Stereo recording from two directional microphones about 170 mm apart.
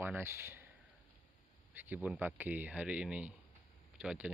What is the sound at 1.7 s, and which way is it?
Speech, 10° right (ahead or behind).